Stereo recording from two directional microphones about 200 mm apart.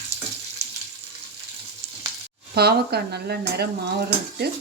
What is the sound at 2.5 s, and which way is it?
Speech, 50° right (ahead or behind).